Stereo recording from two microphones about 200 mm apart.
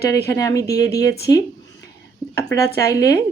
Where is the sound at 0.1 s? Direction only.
15° left (ahead or behind).